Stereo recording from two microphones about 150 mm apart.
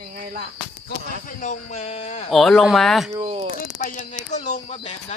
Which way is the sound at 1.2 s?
60° left (ahead or behind).